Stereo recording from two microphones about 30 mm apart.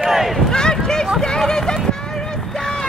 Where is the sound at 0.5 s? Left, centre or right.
Left.